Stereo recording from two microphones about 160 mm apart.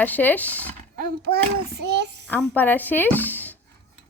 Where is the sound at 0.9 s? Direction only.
70° right (ahead or behind); by 2.2 s 90° right.